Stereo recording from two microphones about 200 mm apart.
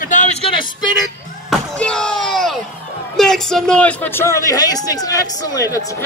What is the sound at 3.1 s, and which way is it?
A man's voice, centre (ahead or behind).